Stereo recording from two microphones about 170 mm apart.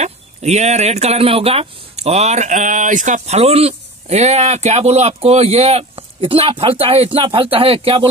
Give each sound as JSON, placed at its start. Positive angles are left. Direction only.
{"t": 0.0, "sound": "speech", "side_deg": -40}